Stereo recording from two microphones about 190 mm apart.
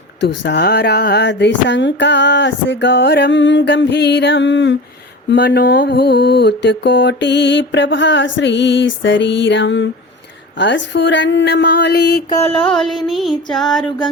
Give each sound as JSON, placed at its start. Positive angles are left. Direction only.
{"t": 0.2, "sound": "mantra", "side_deg": 65}
{"t": 5.3, "sound": "mantra", "side_deg": 60}
{"t": 12.3, "sound": "mantra", "side_deg": 35}
{"t": 12.7, "sound": "music", "side_deg": 0}